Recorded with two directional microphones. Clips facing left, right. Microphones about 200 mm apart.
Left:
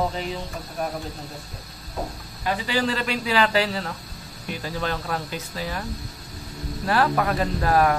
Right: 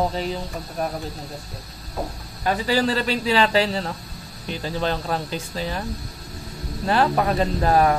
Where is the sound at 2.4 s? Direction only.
40° right (ahead or behind).